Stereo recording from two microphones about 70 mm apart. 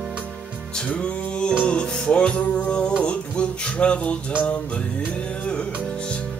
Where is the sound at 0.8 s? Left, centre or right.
Centre.